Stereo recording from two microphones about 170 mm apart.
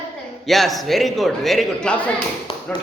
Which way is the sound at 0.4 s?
Centre (ahead or behind).